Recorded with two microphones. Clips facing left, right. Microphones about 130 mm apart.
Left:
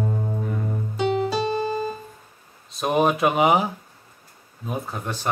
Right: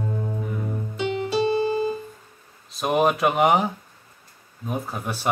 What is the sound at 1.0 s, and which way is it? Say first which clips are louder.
Music: left 1 dB; 40° left (ahead or behind).